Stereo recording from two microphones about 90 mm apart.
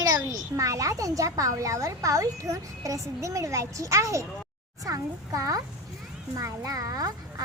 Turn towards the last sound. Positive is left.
turn(degrees=-40)  # may be behind; listen again after turning